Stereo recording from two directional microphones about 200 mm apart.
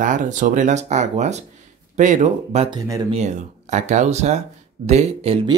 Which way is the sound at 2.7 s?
20° right (ahead or behind).